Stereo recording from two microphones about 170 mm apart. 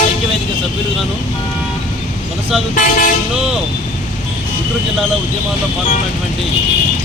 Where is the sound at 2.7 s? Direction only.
55° left (ahead or behind).